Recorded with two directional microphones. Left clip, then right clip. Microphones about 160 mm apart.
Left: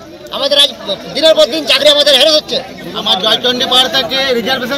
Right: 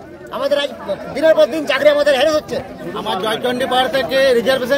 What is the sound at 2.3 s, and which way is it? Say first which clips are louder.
Speech: left 6 dB; 45° right (ahead or behind).